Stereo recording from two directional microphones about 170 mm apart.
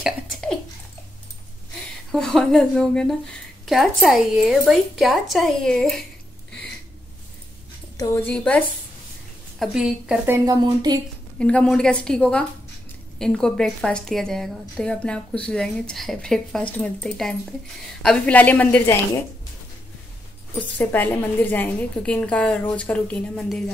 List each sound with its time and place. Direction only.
0.0 s bathtub: centre (ahead or behind)
2.1 s a woman's voice: 5° left (ahead or behind)
8.0 s a woman's voice: 10° left (ahead or behind)
9.6 s a woman's voice: 5° right (ahead or behind)
10.3 s a woman's voice: 20° right (ahead or behind)
11.3 s a woman's voice: 5° left (ahead or behind)
20.7 s a woman's voice: 10° left (ahead or behind)